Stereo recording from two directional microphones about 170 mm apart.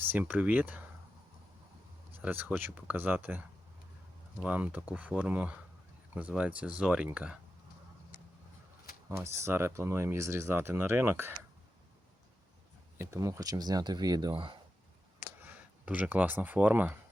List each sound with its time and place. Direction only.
0.0 s speech: 10° right (ahead or behind)
2.2 s speech: 10° right (ahead or behind)
4.4 s speech: 10° right (ahead or behind)
9.0 s speech: 15° right (ahead or behind)
13.0 s speech: 20° right (ahead or behind)
15.4 s speech: 10° right (ahead or behind)